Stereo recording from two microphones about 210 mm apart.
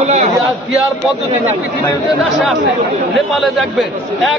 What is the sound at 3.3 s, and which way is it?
A man's voice, centre (ahead or behind).